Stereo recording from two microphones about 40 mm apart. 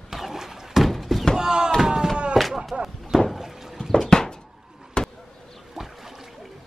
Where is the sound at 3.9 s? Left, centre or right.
Centre.